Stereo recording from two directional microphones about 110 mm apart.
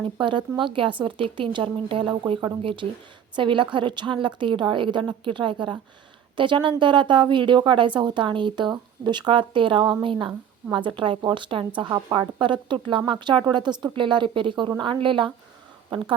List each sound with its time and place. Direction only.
0.0 s a woman's voice: 50° right (ahead or behind)